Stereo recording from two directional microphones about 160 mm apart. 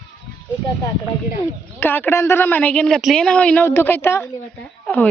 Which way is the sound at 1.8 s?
15° left (ahead or behind).